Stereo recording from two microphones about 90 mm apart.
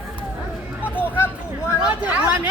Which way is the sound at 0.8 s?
20° left (ahead or behind).